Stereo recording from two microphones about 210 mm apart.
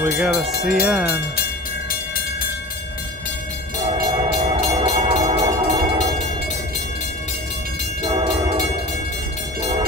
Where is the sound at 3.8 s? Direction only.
25° right (ahead or behind).